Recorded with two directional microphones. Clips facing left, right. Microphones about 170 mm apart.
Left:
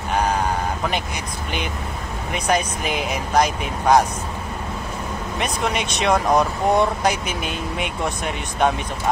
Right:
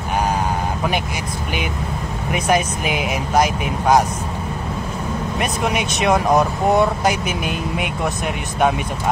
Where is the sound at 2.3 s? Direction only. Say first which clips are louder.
Right 3 dB; 5° right (ahead or behind).